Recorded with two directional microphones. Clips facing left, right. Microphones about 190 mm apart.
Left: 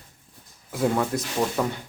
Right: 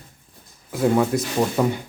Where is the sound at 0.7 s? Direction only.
5° right (ahead or behind).